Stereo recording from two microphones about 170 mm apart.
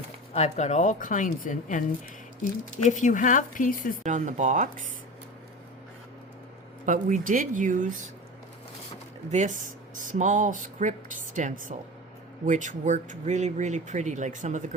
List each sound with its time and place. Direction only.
0.3 s speech: 40° left (ahead or behind)
2.8 s speech: 45° left (ahead or behind)
4.0 s speech: 45° right (ahead or behind)
6.8 s speech: 50° right (ahead or behind)
9.3 s speech: 45° right (ahead or behind)